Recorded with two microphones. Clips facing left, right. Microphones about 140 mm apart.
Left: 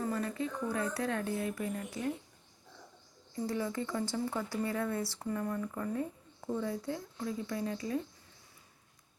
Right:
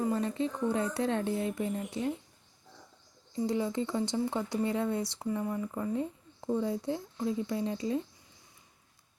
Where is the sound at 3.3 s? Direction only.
20° right (ahead or behind).